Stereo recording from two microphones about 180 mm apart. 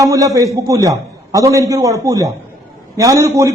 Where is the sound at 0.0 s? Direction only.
20° right (ahead or behind).